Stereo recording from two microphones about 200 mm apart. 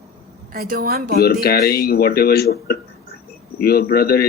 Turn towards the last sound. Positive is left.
turn(degrees=50)  # may be behind; listen again after turning